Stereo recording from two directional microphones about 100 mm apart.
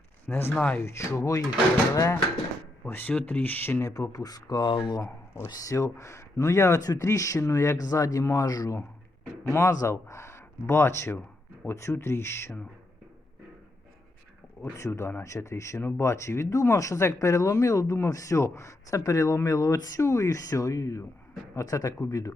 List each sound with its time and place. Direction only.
0.3 s speech: 20° left (ahead or behind)
2.8 s speech: 20° left (ahead or behind); by 5.0 s 45° left (ahead or behind)
5.5 s speech: 35° left (ahead or behind)
14.6 s speech: 30° left (ahead or behind)